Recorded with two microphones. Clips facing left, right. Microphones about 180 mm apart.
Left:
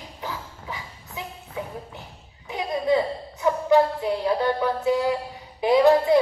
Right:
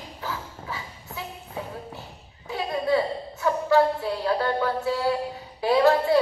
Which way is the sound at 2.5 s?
20° left (ahead or behind).